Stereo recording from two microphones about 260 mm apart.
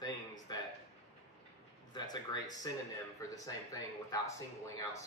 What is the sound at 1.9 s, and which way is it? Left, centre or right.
A man's voice, centre.